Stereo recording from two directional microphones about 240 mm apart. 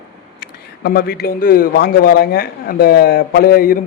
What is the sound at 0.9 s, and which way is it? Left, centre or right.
A man's voice, left.